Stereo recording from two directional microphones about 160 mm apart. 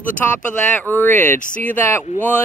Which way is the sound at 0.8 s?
10° left (ahead or behind).